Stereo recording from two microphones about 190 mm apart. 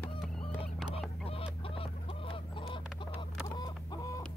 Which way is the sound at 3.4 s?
20° left (ahead or behind).